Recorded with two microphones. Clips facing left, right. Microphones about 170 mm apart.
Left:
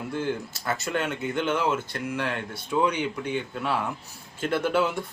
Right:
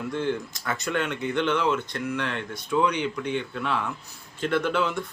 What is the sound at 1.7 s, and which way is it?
Speech, 40° left (ahead or behind).